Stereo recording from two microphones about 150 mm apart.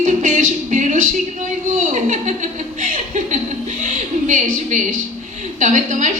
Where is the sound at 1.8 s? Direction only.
55° right (ahead or behind).